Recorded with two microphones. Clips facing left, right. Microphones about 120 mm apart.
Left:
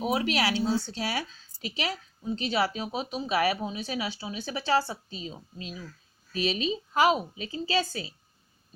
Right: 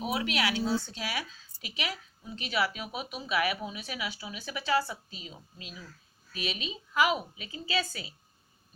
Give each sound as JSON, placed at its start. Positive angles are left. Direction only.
{"t": 0.1, "sound": "a woman's voice", "side_deg": 35}